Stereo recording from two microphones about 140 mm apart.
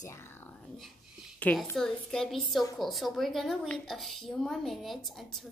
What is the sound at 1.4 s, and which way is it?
A woman's voice, 10° left (ahead or behind).